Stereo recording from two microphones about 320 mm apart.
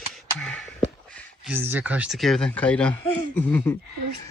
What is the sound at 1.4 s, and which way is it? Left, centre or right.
Speech, centre.